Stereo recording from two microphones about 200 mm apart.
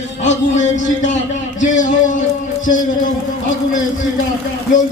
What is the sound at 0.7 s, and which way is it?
A man's voice, 40° left (ahead or behind).